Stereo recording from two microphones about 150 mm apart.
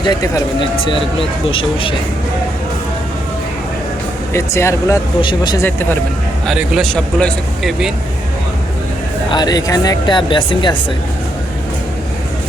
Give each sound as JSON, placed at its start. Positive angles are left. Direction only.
{"t": 0.0, "sound": "a woman's voice", "side_deg": 25}
{"t": 1.5, "sound": "speech", "side_deg": 35}
{"t": 4.3, "sound": "a woman's voice", "side_deg": 20}
{"t": 5.2, "sound": "a woman's voice", "side_deg": 30}
{"t": 5.6, "sound": "speech", "side_deg": 15}
{"t": 6.5, "sound": "a man's voice", "side_deg": 0}
{"t": 9.3, "sound": "a woman's voice", "side_deg": 25}